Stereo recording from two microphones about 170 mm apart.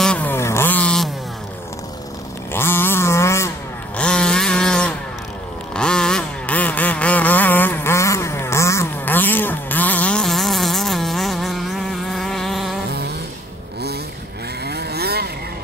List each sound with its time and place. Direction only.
0.0 s vehicle: 10° left (ahead or behind)
2.5 s a sound: 15° left (ahead or behind)
5.7 s vehicle: 5° left (ahead or behind)
14.6 s vehicle: 75° right (ahead or behind)